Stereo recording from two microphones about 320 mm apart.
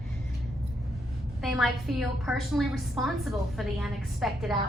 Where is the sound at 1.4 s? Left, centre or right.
Centre.